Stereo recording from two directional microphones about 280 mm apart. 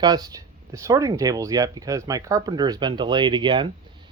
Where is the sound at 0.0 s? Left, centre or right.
Centre.